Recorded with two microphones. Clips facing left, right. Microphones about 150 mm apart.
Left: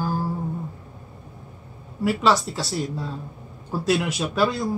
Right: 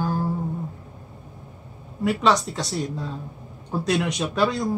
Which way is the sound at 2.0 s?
5° left (ahead or behind).